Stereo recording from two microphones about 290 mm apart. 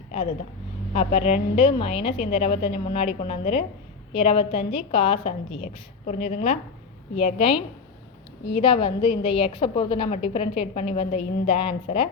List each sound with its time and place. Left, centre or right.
0.9 s a woman's voice: left
8.6 s a woman's voice: centre